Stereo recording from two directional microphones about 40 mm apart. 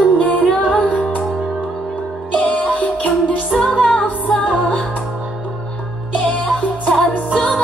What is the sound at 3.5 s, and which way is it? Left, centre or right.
Music, centre.